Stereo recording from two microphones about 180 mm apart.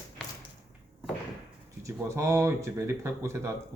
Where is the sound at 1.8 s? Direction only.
15° right (ahead or behind).